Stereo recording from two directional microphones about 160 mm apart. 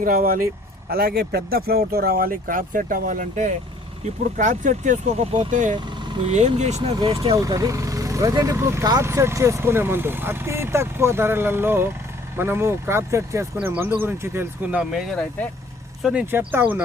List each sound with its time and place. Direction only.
0.0 s speech: 65° right (ahead or behind)
5.7 s vehicle: 30° right (ahead or behind)
6.3 s speech: 45° right (ahead or behind)
7.0 s speech: 30° right (ahead or behind); by 16.8 s 10° right (ahead or behind)